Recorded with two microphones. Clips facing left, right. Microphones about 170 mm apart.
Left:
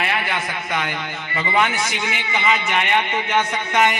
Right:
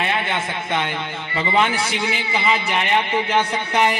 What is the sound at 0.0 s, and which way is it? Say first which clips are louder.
A man's voice: right 1 dB; 25° right (ahead or behind).